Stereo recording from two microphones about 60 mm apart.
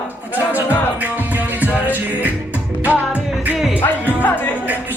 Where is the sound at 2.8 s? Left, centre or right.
Right.